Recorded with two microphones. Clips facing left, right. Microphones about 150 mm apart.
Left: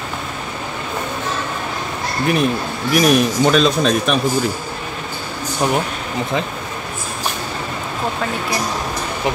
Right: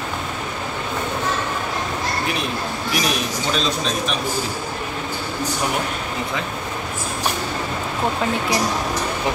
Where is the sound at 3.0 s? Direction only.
60° left (ahead or behind).